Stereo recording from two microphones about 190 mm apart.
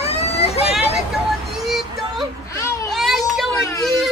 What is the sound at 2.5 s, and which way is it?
Baby cry, 15° left (ahead or behind).